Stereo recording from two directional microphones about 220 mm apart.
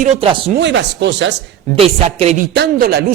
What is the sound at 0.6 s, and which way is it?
Speech, 55° right (ahead or behind).